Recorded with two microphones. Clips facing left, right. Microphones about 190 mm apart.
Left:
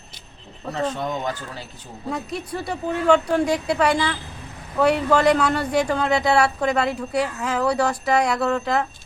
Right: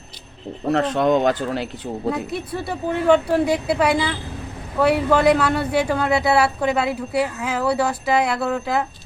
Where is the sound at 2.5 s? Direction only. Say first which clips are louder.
Right 2 dB; 5° right (ahead or behind).